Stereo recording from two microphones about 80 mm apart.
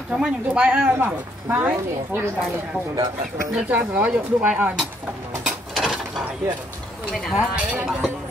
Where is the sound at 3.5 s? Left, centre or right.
Centre.